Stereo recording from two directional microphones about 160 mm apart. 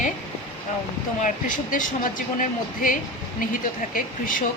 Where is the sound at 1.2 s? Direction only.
55° left (ahead or behind).